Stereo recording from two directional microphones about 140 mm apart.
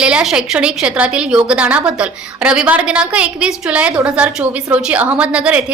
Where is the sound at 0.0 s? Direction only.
5° right (ahead or behind).